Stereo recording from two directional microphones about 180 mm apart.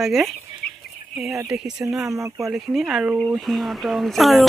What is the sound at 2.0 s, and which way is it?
Speech, 15° right (ahead or behind).